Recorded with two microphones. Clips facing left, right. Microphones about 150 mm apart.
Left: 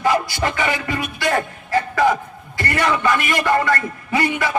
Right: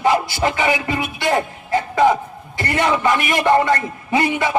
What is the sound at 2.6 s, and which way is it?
A man's voice, 25° right (ahead or behind).